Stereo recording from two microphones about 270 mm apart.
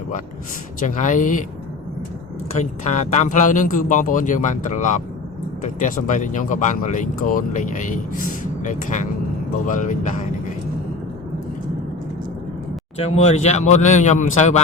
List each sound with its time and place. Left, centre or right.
0.8 s speech: left
2.6 s speech: left
13.0 s speech: left